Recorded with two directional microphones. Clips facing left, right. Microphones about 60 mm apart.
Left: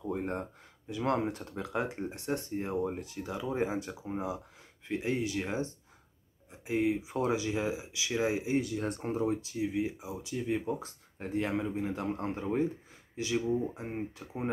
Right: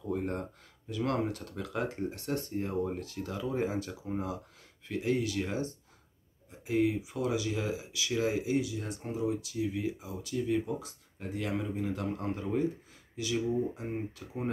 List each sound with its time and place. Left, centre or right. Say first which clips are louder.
0.0 s speech: even; left
7.1 s speech: left 1 dB; left
8.5 s speech: left 1 dB; left
9.4 s speech: left 1 dB; left
10.7 s speech: left 2 dB; left